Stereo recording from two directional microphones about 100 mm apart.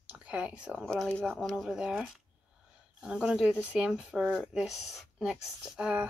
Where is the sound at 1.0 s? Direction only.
10° left (ahead or behind).